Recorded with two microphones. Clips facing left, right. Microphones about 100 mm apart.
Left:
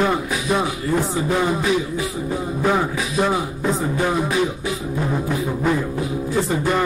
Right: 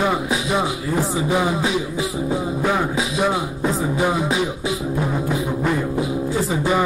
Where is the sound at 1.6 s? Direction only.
20° right (ahead or behind).